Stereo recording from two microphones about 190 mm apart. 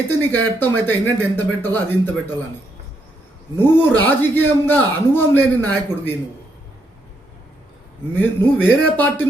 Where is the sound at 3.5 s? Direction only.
10° left (ahead or behind).